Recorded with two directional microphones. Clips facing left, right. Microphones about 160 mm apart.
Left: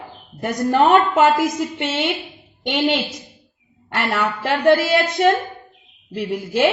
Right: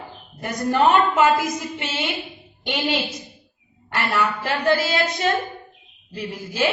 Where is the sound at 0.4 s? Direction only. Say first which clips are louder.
Left 3 dB; 60° left (ahead or behind).